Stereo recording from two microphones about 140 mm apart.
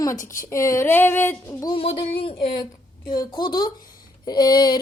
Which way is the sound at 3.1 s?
30° left (ahead or behind).